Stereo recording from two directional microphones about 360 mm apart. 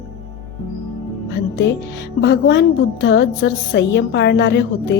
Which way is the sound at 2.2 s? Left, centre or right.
Left.